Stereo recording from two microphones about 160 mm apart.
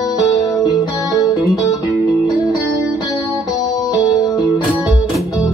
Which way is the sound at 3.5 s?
25° left (ahead or behind).